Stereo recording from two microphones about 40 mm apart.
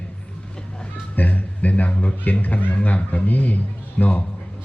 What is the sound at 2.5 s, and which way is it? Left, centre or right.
A man's voice, left.